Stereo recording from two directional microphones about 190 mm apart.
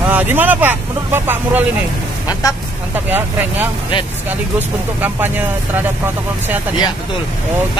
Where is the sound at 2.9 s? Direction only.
10° right (ahead or behind).